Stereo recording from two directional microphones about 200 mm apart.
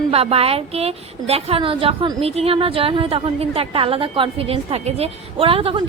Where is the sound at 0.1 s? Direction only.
30° right (ahead or behind).